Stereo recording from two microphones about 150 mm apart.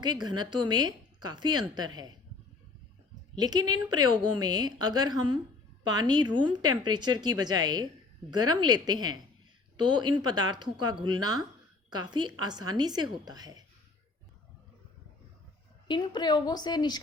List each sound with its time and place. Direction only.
0.0 s a woman's voice: 30° right (ahead or behind)
3.3 s a woman's voice: 25° right (ahead or behind)
15.9 s a woman's voice: 30° left (ahead or behind)